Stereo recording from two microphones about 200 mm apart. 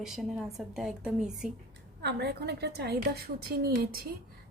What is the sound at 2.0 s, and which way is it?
A woman's voice, 55° right (ahead or behind).